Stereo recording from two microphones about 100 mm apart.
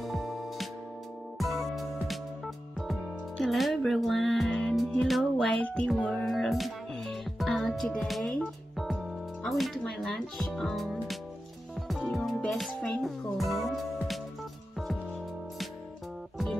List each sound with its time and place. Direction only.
0.0 s music: centre (ahead or behind)
9.4 s speech: centre (ahead or behind)